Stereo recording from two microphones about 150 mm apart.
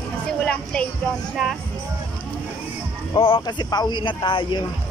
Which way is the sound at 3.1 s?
35° left (ahead or behind).